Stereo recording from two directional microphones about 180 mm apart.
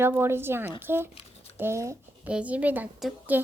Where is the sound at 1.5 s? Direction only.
15° right (ahead or behind).